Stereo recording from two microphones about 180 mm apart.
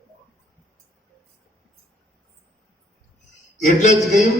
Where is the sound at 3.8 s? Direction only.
40° left (ahead or behind).